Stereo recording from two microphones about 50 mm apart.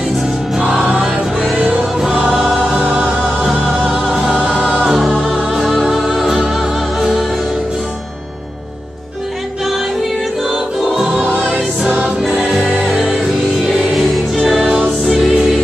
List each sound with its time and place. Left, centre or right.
1.6 s music: centre
4.3 s music: centre
5.5 s music: centre
10.5 s choir: centre
11.1 s music: right
12.8 s music: centre
14.1 s music: centre